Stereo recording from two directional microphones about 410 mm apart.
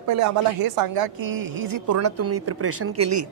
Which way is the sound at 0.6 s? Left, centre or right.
Right.